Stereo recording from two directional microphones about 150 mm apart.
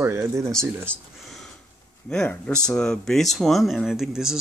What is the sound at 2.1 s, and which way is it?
Speech, 5° left (ahead or behind).